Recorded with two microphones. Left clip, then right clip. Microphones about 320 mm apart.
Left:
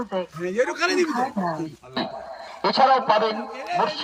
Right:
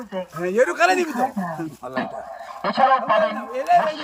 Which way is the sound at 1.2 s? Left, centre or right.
Centre.